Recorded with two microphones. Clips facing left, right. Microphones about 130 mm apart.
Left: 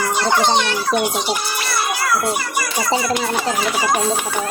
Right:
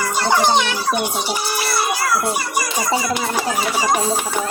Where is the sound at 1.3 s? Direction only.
10° right (ahead or behind).